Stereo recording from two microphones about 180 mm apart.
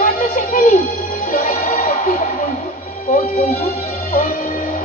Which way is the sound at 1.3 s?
50° left (ahead or behind).